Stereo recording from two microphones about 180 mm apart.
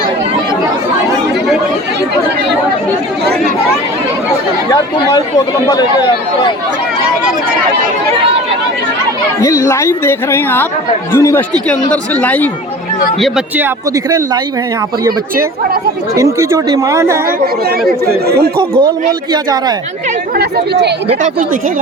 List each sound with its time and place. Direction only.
9.4 s speech: 20° left (ahead or behind)
13.2 s speech: 5° right (ahead or behind)
16.1 s speech: 15° right (ahead or behind)
18.0 s speech: 60° right (ahead or behind)
19.3 s speech: 20° right (ahead or behind)
20.4 s speech: 70° right (ahead or behind)